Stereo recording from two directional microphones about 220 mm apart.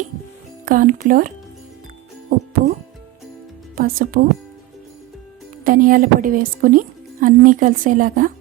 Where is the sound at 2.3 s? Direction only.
40° right (ahead or behind).